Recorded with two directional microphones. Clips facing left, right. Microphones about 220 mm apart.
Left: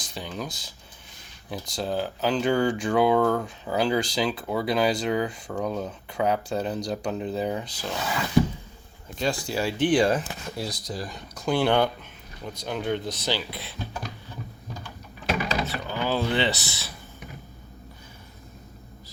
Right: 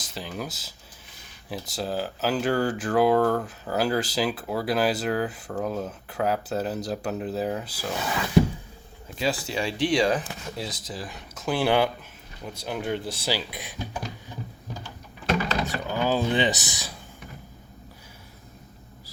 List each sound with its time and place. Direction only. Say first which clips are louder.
0.1 s speech: even; 5° right (ahead or behind)
9.1 s speech: even; 5° right (ahead or behind)
15.6 s speech: right 2 dB; 15° right (ahead or behind)